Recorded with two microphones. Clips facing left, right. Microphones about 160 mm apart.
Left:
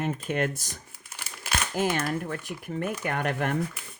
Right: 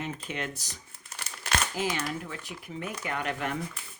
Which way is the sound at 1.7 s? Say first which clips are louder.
Left 5 dB; 55° left (ahead or behind).